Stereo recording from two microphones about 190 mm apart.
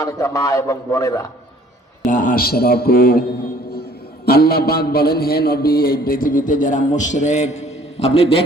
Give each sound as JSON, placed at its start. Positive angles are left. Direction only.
{"t": 0.0, "sound": "a man's voice", "side_deg": 15}
{"t": 2.0, "sound": "a man's voice", "side_deg": 45}
{"t": 4.3, "sound": "a man's voice", "side_deg": 55}